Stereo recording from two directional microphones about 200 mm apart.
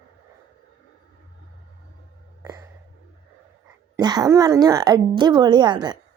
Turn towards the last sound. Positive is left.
turn(degrees=-20)  # may be behind; listen again after turning